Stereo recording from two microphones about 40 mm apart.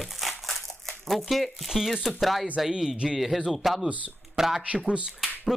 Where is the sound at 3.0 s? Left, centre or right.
Centre.